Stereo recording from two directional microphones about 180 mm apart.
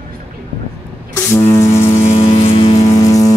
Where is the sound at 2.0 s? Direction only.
35° left (ahead or behind); by 3.3 s 20° left (ahead or behind).